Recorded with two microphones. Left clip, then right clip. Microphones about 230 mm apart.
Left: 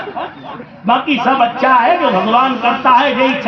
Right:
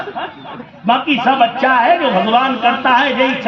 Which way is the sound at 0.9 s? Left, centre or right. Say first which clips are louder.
Even; right.